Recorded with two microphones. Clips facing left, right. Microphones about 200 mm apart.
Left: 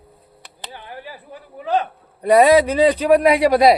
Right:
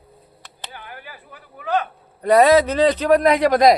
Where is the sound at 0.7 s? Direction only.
25° left (ahead or behind).